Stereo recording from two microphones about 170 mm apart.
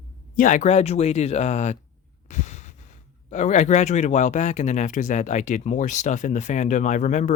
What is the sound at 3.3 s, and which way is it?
Speech, 45° left (ahead or behind).